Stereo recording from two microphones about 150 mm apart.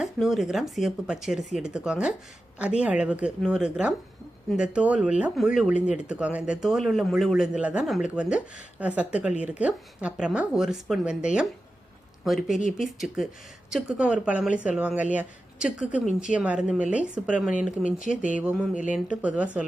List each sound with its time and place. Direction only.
0.0 s speech: centre (ahead or behind)
18.2 s a sound: 60° left (ahead or behind)
18.4 s speech: 5° right (ahead or behind)